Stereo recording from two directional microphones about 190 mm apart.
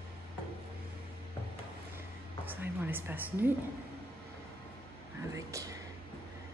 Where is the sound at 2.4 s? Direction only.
10° right (ahead or behind).